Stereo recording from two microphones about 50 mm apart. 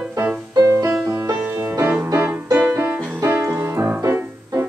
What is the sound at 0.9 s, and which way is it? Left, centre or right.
Music, centre.